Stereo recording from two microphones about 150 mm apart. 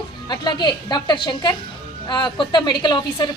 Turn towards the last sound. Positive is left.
turn(degrees=30)  # may be behind; listen again after turning